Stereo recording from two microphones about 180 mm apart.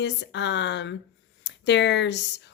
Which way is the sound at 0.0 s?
75° left (ahead or behind).